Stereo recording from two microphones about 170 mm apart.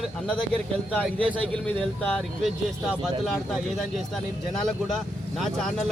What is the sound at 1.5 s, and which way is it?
Speech, 5° left (ahead or behind).